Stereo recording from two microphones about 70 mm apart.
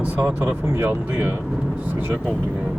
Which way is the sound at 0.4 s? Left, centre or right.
Right.